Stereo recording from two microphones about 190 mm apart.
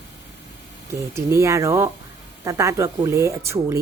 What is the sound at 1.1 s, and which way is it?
Speech, 15° right (ahead or behind).